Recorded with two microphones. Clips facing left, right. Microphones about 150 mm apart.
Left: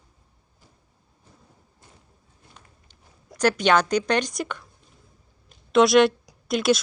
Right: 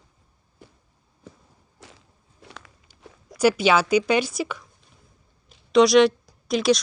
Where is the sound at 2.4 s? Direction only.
90° right.